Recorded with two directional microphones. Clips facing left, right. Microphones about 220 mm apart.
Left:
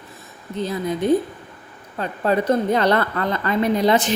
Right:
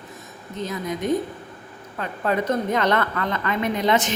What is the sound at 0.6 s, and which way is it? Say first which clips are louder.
A woman's voice: left 4 dB; 30° left (ahead or behind).